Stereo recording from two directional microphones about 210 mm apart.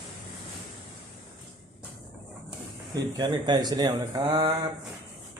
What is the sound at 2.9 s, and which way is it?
Speech, 20° right (ahead or behind).